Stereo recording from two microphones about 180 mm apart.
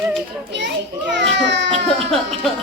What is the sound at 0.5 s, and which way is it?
Children playing, 75° right (ahead or behind).